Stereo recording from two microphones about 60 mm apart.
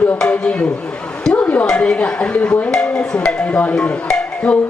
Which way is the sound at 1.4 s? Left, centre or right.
Left.